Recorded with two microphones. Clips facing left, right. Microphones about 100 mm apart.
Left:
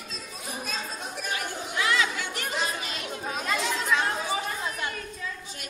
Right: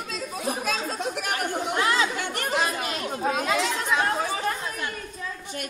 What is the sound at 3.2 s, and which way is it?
Chatter, 70° right (ahead or behind).